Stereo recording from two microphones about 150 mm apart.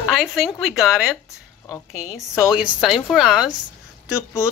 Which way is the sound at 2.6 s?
5° right (ahead or behind).